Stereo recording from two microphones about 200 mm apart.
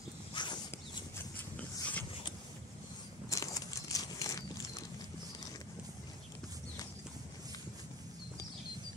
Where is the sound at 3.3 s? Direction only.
15° left (ahead or behind).